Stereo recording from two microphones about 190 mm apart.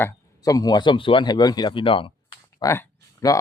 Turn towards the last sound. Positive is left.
turn(degrees=15)  # may be behind; listen again after turning